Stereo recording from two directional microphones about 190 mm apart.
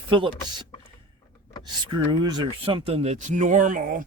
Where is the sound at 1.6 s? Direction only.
25° right (ahead or behind).